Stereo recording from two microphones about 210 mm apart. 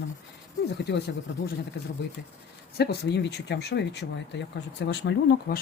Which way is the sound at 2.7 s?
50° left (ahead or behind).